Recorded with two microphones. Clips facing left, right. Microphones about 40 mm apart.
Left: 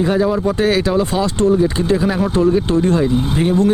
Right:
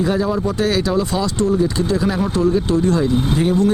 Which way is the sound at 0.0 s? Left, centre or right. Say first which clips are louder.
Left 3 dB; centre.